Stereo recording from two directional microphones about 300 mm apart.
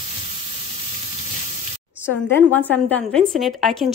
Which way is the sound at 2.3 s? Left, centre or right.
Centre.